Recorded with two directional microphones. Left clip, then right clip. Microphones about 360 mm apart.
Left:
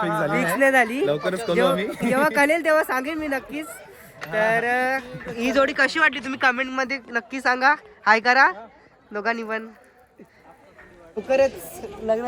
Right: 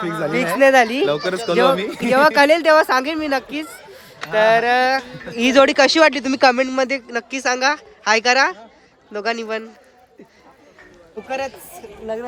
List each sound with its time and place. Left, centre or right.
0.0 s speech: centre
0.3 s speech: centre
1.0 s speech: centre
11.2 s speech: centre